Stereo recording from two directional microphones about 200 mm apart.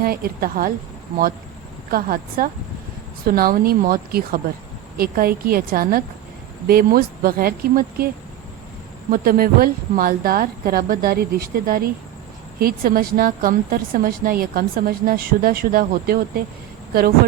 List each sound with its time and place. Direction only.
0.0 s a woman's voice: 50° right (ahead or behind)
1.9 s a woman's voice: 45° right (ahead or behind)
9.1 s a woman's voice: 45° right (ahead or behind)